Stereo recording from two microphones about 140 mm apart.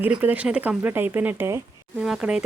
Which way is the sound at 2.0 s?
5° right (ahead or behind).